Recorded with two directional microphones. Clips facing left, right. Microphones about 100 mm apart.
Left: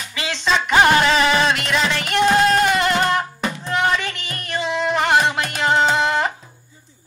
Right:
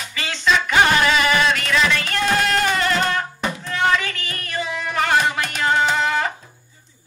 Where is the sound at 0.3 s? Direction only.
25° left (ahead or behind).